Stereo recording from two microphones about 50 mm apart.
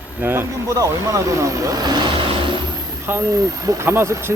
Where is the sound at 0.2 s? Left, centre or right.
Right.